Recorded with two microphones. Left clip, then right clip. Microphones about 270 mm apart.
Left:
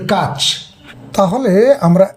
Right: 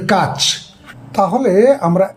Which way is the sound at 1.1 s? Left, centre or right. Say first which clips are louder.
Even; left.